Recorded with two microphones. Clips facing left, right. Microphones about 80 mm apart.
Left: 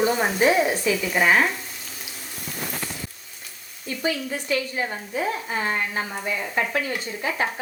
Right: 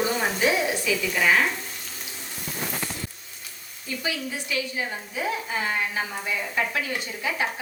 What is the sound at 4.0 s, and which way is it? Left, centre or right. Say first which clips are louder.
A woman's voice: left 5 dB; left.